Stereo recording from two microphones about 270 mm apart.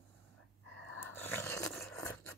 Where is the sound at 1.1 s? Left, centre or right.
Centre.